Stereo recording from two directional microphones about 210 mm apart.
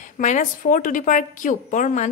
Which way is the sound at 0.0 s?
35° left (ahead or behind).